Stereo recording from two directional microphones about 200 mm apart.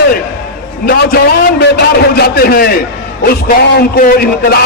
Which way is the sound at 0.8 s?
50° left (ahead or behind).